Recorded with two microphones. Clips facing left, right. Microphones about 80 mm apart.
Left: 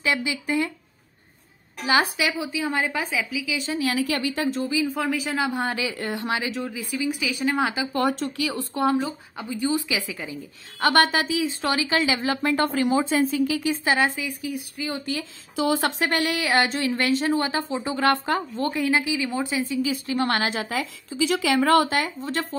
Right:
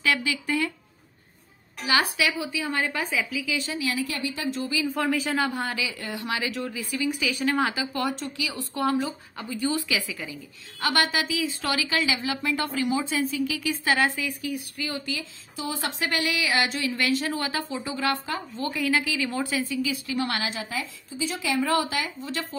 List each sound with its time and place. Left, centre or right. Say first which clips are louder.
0.0 s speech: left 1 dB; left
1.9 s speech: left 2 dB; left
3.7 s speech: left 5 dB; left
4.6 s speech: left 3 dB; left
4.9 s speech: even; centre
5.5 s speech: left 3 dB; left
8.0 s speech: left 7 dB; left
8.7 s speech: left 2 dB; left
10.8 s speech: left 5 dB; left; by 15.0 s centre
15.5 s speech: left 9 dB; left
16.0 s speech: left 3 dB; left
18.7 s speech: left 2 dB; left
19.8 s a woman's voice: left 3 dB; left